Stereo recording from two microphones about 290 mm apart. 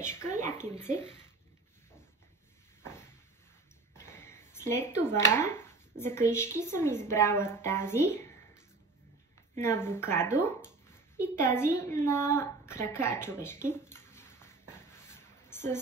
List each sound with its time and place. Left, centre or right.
0.0 s speech: centre
0.3 s a sound: right
0.6 s speech: centre
3.9 s speech: centre
9.6 s speech: centre
11.4 s a sound: centre